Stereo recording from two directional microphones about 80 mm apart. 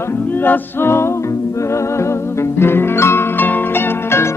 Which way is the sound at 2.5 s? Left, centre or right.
Left.